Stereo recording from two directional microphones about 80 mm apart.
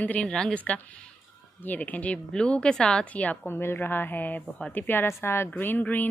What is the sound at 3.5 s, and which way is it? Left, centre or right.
Speech, left.